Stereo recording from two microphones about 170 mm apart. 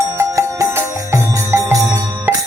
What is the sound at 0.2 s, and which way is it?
Music, 15° right (ahead or behind).